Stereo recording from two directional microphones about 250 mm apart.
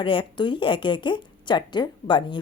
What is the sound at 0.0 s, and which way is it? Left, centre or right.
Speech, centre.